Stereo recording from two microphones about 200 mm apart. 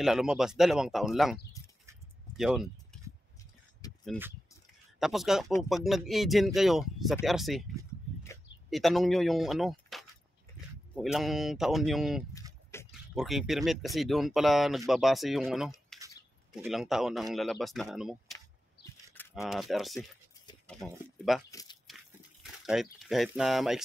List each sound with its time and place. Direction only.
0.0 s speech: centre (ahead or behind)
2.3 s a sound: centre (ahead or behind)
3.8 s a sound: 20° left (ahead or behind)
4.9 s speech: centre (ahead or behind)
8.6 s speech: centre (ahead or behind)
15.9 s bird: centre (ahead or behind)
16.5 s speech: centre (ahead or behind)
21.5 s biting: 20° left (ahead or behind)
21.8 s a sound: centre (ahead or behind)